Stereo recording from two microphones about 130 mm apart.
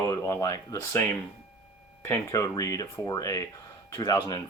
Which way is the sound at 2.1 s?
25° left (ahead or behind).